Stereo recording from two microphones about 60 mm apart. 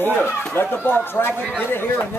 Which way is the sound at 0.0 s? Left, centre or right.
Left.